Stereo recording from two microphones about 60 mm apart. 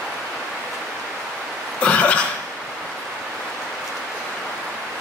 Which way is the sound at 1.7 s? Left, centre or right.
Left.